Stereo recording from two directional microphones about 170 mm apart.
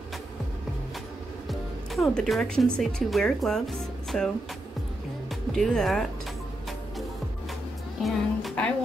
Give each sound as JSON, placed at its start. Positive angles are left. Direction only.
{"t": 1.5, "sound": "music", "side_deg": 0}
{"t": 2.8, "sound": "speech", "side_deg": 0}
{"t": 5.3, "sound": "speech", "side_deg": 0}
{"t": 8.0, "sound": "speech", "side_deg": 0}